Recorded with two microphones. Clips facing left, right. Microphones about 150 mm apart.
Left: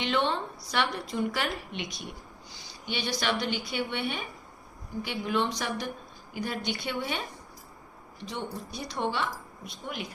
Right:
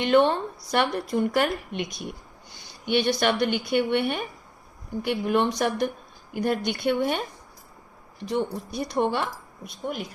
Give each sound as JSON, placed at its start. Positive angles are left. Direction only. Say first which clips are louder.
{"t": 0.0, "sound": "a woman's voice", "louder": "right 8 dB", "side_deg": -50}
{"t": 8.2, "sound": "a woman's voice", "louder": "right 9 dB", "side_deg": -55}